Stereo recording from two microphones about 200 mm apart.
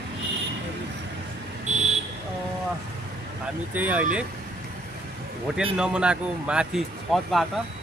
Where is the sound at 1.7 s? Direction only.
35° right (ahead or behind).